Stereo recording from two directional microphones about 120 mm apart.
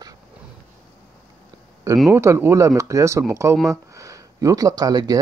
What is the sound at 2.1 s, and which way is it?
Speech, 20° right (ahead or behind).